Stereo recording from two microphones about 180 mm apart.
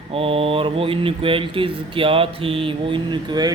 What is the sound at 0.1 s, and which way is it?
Speech, 30° right (ahead or behind).